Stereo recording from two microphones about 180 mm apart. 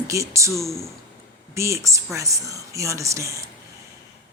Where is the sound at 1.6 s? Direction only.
15° right (ahead or behind).